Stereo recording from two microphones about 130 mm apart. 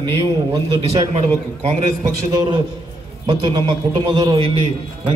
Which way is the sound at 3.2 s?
40° right (ahead or behind).